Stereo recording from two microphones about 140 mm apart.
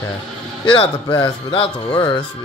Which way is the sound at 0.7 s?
35° left (ahead or behind).